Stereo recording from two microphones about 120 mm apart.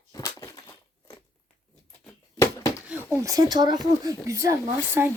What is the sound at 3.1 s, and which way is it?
Speech, 30° right (ahead or behind).